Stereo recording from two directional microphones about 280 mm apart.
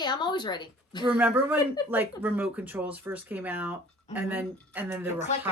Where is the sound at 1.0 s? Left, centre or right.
Centre.